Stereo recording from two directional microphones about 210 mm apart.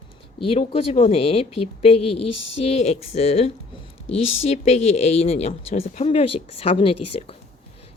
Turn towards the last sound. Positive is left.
turn(degrees=25)  # may be behind; listen again after turning